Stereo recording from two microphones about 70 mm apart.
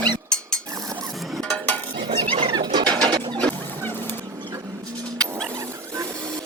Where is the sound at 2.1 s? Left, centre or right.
Right.